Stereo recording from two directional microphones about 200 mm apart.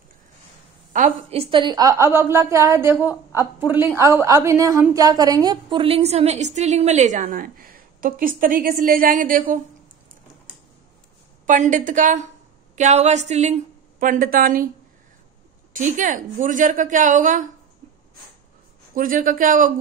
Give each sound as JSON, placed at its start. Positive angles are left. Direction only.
{"t": 0.9, "sound": "a woman's voice", "side_deg": -35}
{"t": 11.4, "sound": "a woman's voice", "side_deg": -40}
{"t": 15.7, "sound": "a woman's voice", "side_deg": -40}
{"t": 18.9, "sound": "a woman's voice", "side_deg": -45}